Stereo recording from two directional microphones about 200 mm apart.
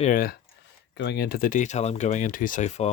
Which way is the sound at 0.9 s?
55° left (ahead or behind).